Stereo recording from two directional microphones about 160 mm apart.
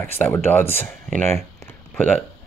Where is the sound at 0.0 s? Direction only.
15° left (ahead or behind).